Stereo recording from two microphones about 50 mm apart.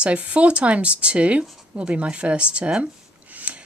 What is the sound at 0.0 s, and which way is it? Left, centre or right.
Speech, right.